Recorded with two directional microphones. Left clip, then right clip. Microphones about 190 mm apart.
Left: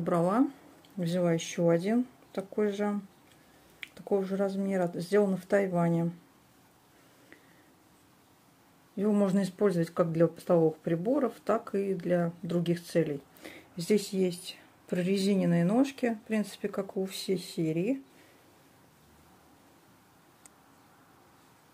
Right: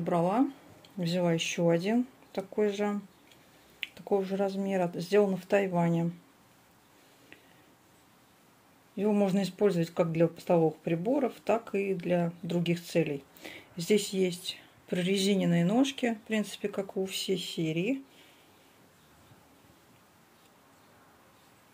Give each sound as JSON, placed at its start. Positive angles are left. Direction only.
{"t": 0.0, "sound": "speech", "side_deg": 15}
{"t": 3.9, "sound": "speech", "side_deg": 5}
{"t": 4.6, "sound": "speech", "side_deg": -5}
{"t": 4.9, "sound": "speech", "side_deg": 5}
{"t": 8.9, "sound": "speech", "side_deg": 5}
{"t": 17.6, "sound": "speech", "side_deg": 45}